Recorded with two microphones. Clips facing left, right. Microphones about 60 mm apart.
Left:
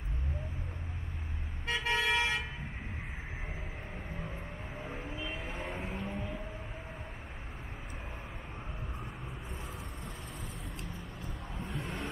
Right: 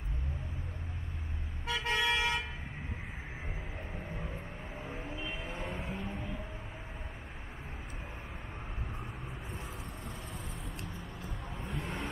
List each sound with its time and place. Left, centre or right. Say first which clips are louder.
1.9 s toot: even; centre
4.7 s vehicle: left 1 dB; centre
11.0 s vehicle: even; centre